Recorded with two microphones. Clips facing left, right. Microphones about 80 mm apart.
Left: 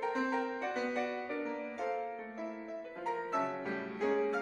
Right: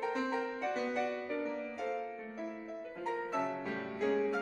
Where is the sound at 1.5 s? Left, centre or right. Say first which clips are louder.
Left 1 dB; centre.